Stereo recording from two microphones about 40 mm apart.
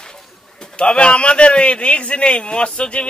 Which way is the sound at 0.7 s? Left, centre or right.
Left.